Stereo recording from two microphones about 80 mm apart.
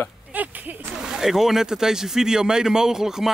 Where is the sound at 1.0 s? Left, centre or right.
Centre.